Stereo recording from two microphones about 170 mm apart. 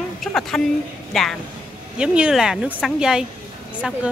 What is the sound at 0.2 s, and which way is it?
A woman's voice, centre (ahead or behind).